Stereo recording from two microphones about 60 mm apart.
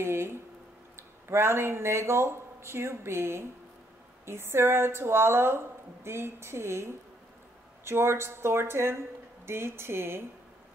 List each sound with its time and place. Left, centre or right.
0.0 s a woman's voice: right